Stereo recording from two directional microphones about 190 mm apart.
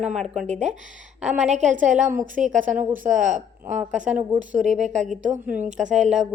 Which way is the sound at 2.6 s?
10° right (ahead or behind).